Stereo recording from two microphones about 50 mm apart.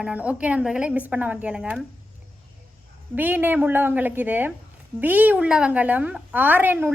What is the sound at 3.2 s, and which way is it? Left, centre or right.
A woman's voice, right.